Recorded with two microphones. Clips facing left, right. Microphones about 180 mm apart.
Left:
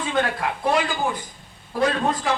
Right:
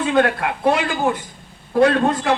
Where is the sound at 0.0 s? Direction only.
65° right (ahead or behind).